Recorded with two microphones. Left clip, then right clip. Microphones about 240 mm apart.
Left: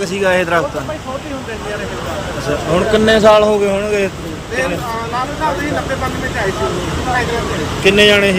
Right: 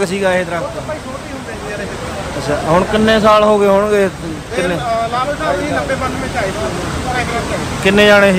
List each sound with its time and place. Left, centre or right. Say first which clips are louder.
0.0 s speech: even; centre
2.9 s speech: left 3 dB; centre
7.9 s speech: right 1 dB; centre